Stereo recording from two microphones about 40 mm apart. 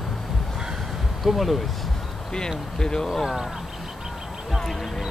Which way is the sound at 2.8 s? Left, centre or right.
Centre.